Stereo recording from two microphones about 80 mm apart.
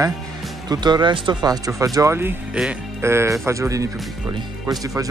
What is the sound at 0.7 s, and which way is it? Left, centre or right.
Speech, right.